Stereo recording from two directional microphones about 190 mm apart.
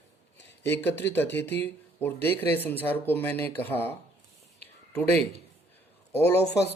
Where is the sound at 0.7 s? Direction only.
10° left (ahead or behind).